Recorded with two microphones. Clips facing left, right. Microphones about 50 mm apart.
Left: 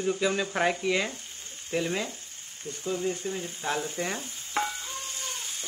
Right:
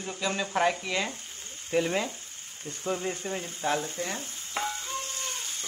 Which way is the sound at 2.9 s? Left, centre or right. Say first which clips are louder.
Even; right.